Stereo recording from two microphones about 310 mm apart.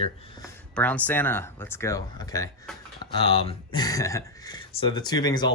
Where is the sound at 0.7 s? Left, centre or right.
Centre.